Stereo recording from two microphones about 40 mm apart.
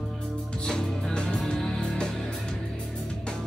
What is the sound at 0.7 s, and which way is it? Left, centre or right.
Music, left.